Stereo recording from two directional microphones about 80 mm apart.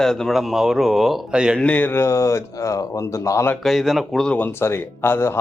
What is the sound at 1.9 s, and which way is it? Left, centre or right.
Speech, left.